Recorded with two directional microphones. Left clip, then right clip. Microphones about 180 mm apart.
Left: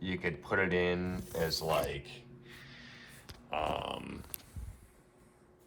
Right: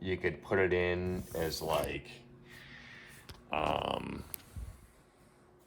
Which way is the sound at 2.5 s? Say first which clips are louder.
Right 1 dB; 30° right (ahead or behind).